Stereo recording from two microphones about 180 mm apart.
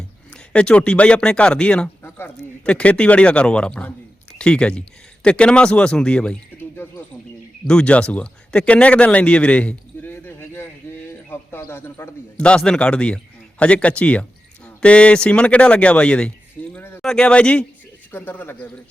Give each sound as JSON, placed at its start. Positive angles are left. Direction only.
{"t": 0.5, "sound": "a man's voice", "side_deg": 5}
{"t": 16.7, "sound": "a sound", "side_deg": 10}
{"t": 17.0, "sound": "speech", "side_deg": 5}